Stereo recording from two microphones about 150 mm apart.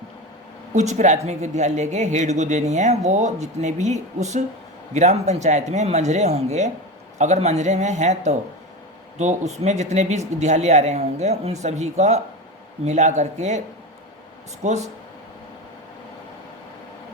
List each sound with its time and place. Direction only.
0.7 s speech: 50° right (ahead or behind)
14.6 s speech: 50° right (ahead or behind)